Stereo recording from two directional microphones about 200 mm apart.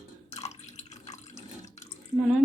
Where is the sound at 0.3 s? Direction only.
35° left (ahead or behind).